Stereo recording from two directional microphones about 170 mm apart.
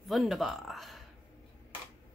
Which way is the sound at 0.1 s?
Centre (ahead or behind).